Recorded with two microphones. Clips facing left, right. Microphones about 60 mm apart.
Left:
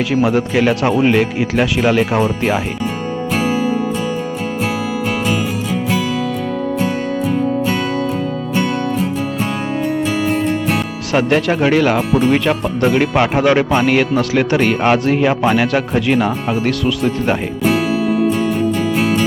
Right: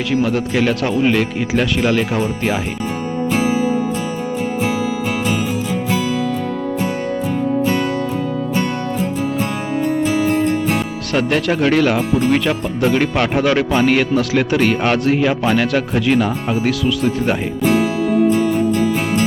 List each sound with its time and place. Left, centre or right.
0.1 s speech: centre
3.4 s music: left
11.1 s speech: centre